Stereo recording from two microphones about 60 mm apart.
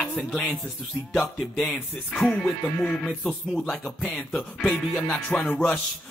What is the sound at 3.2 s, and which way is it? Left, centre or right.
Speech, centre.